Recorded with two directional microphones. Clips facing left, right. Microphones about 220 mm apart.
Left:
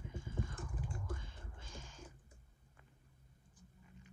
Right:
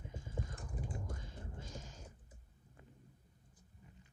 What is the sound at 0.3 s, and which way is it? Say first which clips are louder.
Mechanisms: left 1 dB; 35° right (ahead or behind).